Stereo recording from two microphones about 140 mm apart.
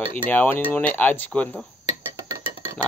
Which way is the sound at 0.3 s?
15° left (ahead or behind).